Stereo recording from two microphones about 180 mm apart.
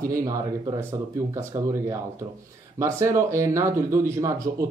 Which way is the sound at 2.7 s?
15° right (ahead or behind).